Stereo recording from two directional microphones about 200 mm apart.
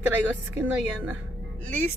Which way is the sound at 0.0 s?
10° right (ahead or behind).